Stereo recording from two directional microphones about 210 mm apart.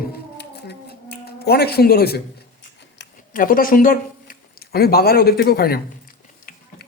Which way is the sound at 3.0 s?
40° left (ahead or behind).